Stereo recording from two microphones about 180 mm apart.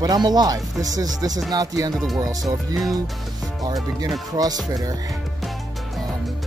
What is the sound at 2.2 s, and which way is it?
Speech, 20° right (ahead or behind).